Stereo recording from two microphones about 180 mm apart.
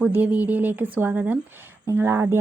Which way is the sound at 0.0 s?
10° right (ahead or behind).